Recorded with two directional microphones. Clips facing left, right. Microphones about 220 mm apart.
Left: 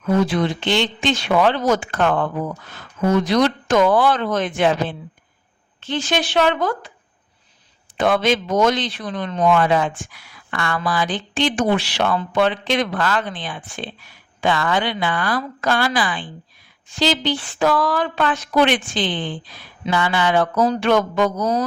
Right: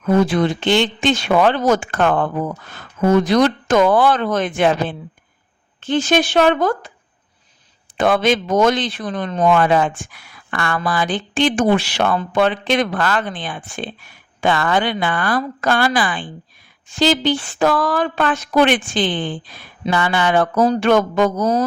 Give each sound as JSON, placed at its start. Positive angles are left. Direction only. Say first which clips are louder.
{"t": 0.0, "sound": "a man's voice", "louder": "right 3 dB", "side_deg": -50}
{"t": 7.9, "sound": "a man's voice", "louder": "right 2 dB", "side_deg": -50}